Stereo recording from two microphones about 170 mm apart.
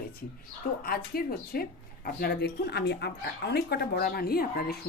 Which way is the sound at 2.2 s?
70° left (ahead or behind).